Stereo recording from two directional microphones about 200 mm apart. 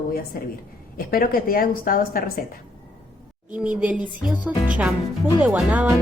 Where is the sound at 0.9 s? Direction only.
45° left (ahead or behind).